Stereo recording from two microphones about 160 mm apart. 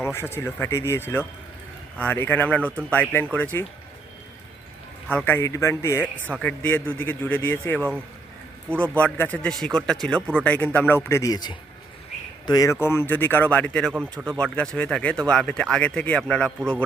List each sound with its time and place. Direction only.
0.0 s speech: 15° left (ahead or behind)
5.0 s speech: 10° left (ahead or behind)
7.8 s speech: 10° right (ahead or behind)
8.8 s speech: 10° left (ahead or behind)
13.9 s speech: 15° right (ahead or behind)
14.4 s speech: 5° left (ahead or behind)